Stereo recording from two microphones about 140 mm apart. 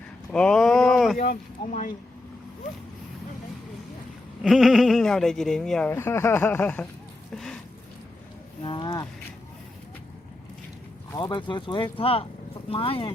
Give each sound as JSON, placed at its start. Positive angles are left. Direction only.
{"t": 0.3, "sound": "a sound", "side_deg": 5}
{"t": 1.2, "sound": "speech", "side_deg": 65}
{"t": 4.4, "sound": "speech", "side_deg": 0}
{"t": 7.3, "sound": "a sound", "side_deg": 5}
{"t": 8.6, "sound": "speech", "side_deg": 35}
{"t": 11.2, "sound": "speech", "side_deg": 35}